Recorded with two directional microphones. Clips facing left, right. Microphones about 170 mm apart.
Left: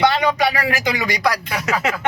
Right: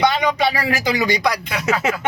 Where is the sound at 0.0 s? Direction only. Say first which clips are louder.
Left 1 dB; 15° right (ahead or behind).